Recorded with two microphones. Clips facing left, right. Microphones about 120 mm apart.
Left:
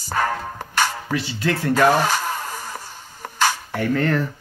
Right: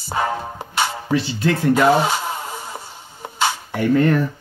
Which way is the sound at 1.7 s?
15° right (ahead or behind).